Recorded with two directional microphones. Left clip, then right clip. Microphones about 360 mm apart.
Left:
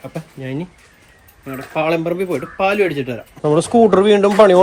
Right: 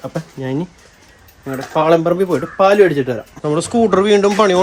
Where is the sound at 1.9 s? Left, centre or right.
Right.